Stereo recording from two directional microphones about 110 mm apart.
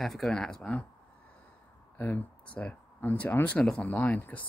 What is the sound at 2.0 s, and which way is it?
Speech, 15° left (ahead or behind).